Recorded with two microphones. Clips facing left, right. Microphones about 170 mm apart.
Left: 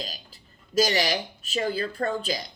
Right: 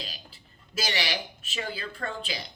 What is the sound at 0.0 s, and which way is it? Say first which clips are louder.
Speech: left 5 dB; 40° left (ahead or behind).